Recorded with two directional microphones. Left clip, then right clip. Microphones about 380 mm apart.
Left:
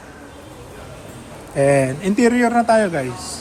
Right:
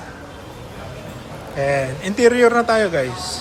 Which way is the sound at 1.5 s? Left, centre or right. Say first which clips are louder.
Left 4 dB; centre.